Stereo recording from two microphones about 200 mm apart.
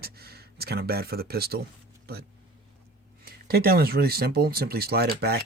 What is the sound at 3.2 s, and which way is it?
Speech, 50° right (ahead or behind).